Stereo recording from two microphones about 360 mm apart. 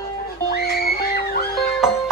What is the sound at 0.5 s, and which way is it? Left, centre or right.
Music, left.